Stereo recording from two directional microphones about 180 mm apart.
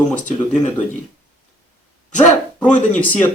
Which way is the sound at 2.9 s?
10° left (ahead or behind).